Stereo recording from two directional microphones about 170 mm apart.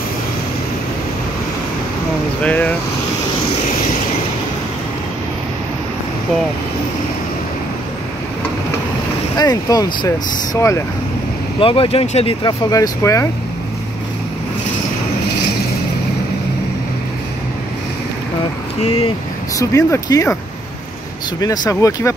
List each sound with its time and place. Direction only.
2.4 s speech: 10° left (ahead or behind)
9.4 s speech: 20° left (ahead or behind)
11.6 s speech: 30° left (ahead or behind)
12.4 s speech: 20° left (ahead or behind)
19.7 s speech: 20° left (ahead or behind)
21.4 s speech: 20° left (ahead or behind)